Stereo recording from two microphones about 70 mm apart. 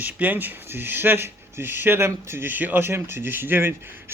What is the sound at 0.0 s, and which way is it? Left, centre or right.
Speech, right.